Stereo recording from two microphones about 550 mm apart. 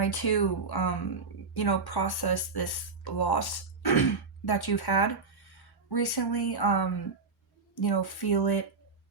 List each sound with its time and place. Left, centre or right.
0.0 s speech: left